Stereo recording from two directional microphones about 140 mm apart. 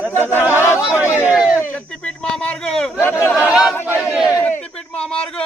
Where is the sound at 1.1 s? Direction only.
10° right (ahead or behind).